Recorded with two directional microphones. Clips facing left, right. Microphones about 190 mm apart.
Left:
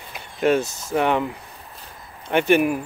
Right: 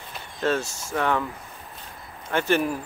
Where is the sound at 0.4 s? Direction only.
15° left (ahead or behind).